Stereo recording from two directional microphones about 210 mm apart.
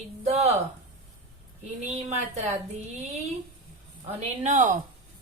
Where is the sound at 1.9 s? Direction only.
30° right (ahead or behind).